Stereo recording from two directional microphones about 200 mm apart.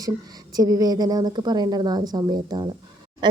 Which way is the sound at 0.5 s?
20° right (ahead or behind).